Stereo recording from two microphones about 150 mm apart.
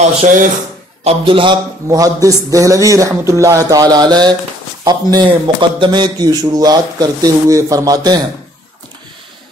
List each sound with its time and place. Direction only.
0.0 s speech: 55° right (ahead or behind)
1.0 s a man's voice: 35° right (ahead or behind)